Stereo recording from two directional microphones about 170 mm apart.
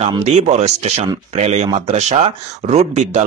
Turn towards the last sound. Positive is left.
turn(degrees=-40)  # may be behind; listen again after turning